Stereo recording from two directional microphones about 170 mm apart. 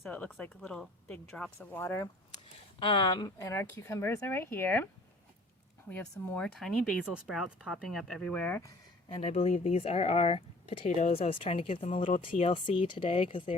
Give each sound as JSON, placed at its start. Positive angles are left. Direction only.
{"t": 0.0, "sound": "speech", "side_deg": 10}
{"t": 2.7, "sound": "speech", "side_deg": 30}
{"t": 5.9, "sound": "speech", "side_deg": 5}
{"t": 9.0, "sound": "speech", "side_deg": 35}